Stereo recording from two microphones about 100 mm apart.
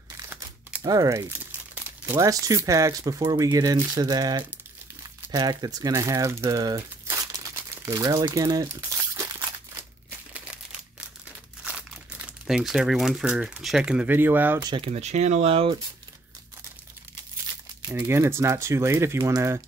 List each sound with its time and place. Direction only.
0.3 s crumpling: 15° right (ahead or behind)
0.8 s speech: 35° right (ahead or behind)
1.2 s crumpling: 20° right (ahead or behind)
2.1 s speech: 35° right (ahead or behind)
6.6 s crumpling: 30° right (ahead or behind)
12.4 s speech: 5° right (ahead or behind)
14.1 s speech: 20° right (ahead or behind)
14.8 s speech: 90° right; by 15.8 s 65° right (ahead or behind)
17.8 s speech: 25° right (ahead or behind)